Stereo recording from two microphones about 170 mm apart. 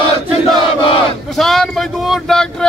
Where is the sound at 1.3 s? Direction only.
Centre (ahead or behind).